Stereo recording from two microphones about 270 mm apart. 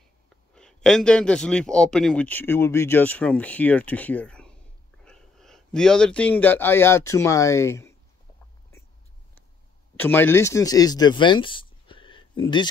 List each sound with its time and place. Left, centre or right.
0.6 s a man's voice: centre
9.9 s speech: centre